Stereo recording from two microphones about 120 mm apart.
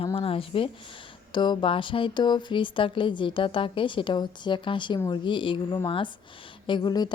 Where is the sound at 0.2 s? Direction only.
50° left (ahead or behind).